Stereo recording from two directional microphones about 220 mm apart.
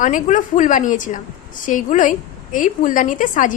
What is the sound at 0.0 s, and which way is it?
A woman's voice, 35° left (ahead or behind).